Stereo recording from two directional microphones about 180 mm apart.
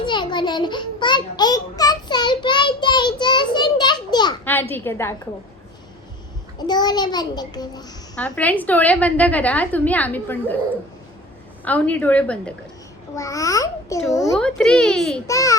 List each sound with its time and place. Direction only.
0.0 s a sound: 25° left (ahead or behind)
4.7 s a woman's voice: 15° left (ahead or behind)
6.7 s a child's voice: 25° left (ahead or behind)
8.1 s a woman's voice: 5° left (ahead or behind)
11.6 s a woman's voice: 10° left (ahead or behind)
13.1 s a woman's voice: 20° left (ahead or behind)
14.3 s a child's voice: 5° left (ahead or behind)
15.3 s a child's voice: 20° left (ahead or behind)